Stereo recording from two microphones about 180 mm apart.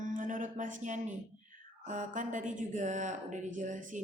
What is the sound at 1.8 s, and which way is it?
A woman's voice, 45° right (ahead or behind).